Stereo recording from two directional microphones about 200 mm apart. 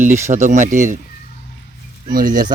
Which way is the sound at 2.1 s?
45° right (ahead or behind).